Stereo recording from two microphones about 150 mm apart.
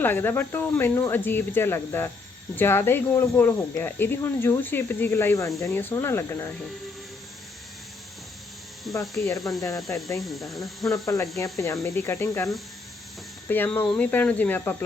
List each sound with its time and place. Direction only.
0.0 s speech: 15° left (ahead or behind)
8.9 s speech: 20° left (ahead or behind)
10.2 s speech: centre (ahead or behind)
10.8 s speech: 20° left (ahead or behind)
13.5 s speech: 10° left (ahead or behind)